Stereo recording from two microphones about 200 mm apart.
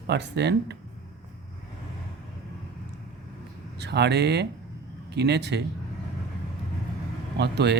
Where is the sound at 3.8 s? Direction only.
55° right (ahead or behind).